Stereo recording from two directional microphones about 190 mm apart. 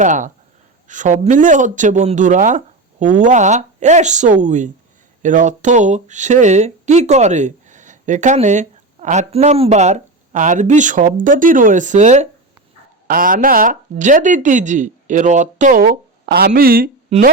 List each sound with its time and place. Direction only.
0.0 s speech: 40° right (ahead or behind)
13.1 s speech: 50° right (ahead or behind)
17.1 s speech: 35° right (ahead or behind)